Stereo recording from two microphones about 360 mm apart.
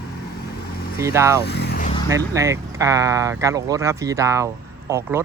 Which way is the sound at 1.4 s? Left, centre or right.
Left.